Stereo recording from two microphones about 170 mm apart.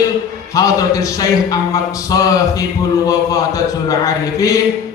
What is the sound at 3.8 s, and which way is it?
Speech, 20° left (ahead or behind).